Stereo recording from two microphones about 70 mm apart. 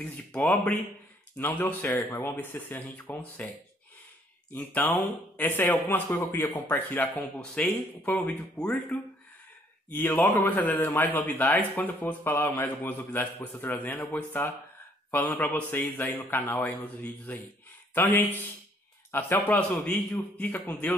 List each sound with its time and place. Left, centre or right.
0.0 s speech: centre
4.6 s speech: left
7.2 s speech: centre
9.8 s speech: left